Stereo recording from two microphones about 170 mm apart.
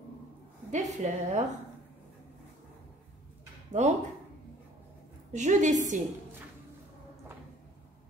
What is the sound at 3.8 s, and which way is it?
Speech, 40° right (ahead or behind).